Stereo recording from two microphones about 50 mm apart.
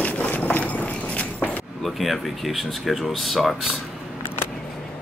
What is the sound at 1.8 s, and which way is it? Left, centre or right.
Speech, centre.